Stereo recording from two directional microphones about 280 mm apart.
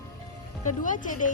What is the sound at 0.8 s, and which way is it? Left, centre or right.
Speech, left.